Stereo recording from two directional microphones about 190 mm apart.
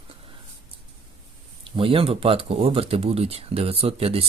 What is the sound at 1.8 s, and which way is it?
Speech, 30° right (ahead or behind).